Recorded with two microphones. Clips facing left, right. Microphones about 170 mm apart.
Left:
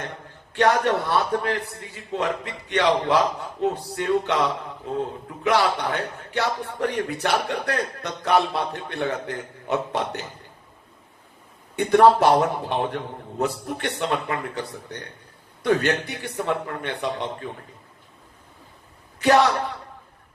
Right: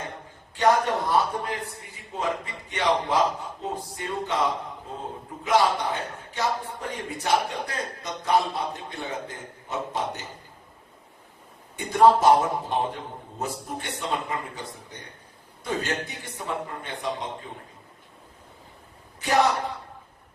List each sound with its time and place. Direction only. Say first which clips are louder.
0.5 s speech: left 2 dB; 70° left (ahead or behind)
5.4 s speech: left 1 dB; 70° left (ahead or behind)
11.8 s speech: left 3 dB; 70° left (ahead or behind)
19.2 s speech: left 5 dB; 70° left (ahead or behind)